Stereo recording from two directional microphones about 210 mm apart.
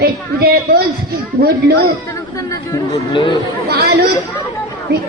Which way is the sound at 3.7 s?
50° right (ahead or behind).